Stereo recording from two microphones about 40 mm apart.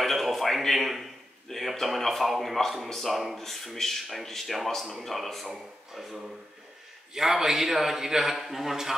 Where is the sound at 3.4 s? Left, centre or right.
Centre.